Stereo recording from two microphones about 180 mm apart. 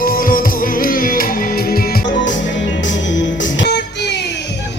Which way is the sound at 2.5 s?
90° left.